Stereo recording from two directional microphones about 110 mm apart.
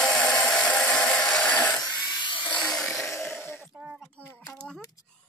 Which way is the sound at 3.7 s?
15° right (ahead or behind).